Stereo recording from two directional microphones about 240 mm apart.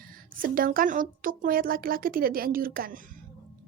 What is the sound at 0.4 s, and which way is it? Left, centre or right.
A woman's voice, right.